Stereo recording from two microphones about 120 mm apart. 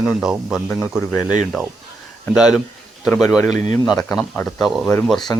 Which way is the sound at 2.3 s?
5° right (ahead or behind).